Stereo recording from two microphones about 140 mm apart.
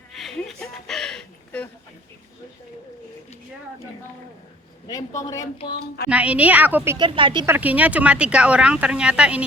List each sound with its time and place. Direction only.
0.1 s a sound: centre (ahead or behind)
4.9 s a man's voice: 25° left (ahead or behind)
6.1 s speech: 10° right (ahead or behind)
6.9 s speech: 35° right (ahead or behind)
7.4 s speech: 15° right (ahead or behind)